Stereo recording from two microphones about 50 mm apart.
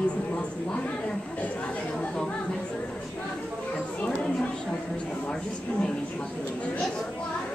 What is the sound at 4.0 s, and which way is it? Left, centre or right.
Speech, left.